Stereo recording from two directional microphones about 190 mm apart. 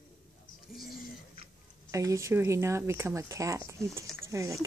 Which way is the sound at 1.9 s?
15° right (ahead or behind).